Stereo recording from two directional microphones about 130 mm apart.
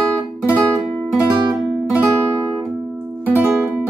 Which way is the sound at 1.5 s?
10° right (ahead or behind).